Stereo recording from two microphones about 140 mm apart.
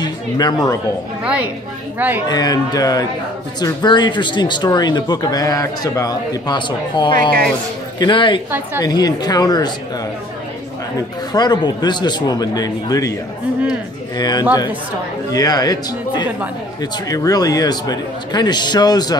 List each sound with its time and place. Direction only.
0.0 s speech: 30° left (ahead or behind)
1.2 s a woman's voice: 10° right (ahead or behind)
2.2 s speech: 30° left (ahead or behind)
8.5 s a woman's voice: 15° right (ahead or behind)
8.8 s speech: 30° left (ahead or behind)
11.0 s speech: 30° left (ahead or behind)
14.1 s speech: 30° left (ahead or behind)